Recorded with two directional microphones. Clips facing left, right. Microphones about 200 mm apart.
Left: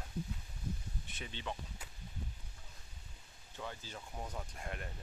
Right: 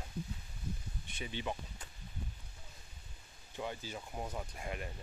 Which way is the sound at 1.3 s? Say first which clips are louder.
Right 4 dB; 10° right (ahead or behind).